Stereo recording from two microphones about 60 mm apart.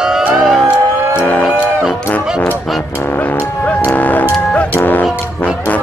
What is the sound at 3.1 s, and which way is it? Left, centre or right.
Music, left.